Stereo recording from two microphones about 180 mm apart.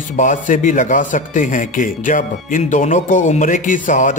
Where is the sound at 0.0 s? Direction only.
45° left (ahead or behind).